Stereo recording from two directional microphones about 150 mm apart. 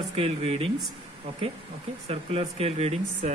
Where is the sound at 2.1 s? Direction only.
40° right (ahead or behind).